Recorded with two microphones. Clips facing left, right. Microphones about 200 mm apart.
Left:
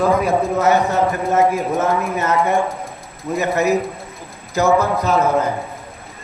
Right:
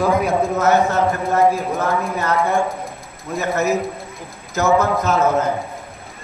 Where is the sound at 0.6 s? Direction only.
15° left (ahead or behind).